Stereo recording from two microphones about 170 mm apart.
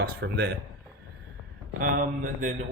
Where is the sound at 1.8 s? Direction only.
50° right (ahead or behind).